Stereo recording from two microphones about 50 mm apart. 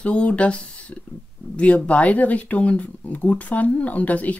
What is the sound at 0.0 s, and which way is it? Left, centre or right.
Speech, left.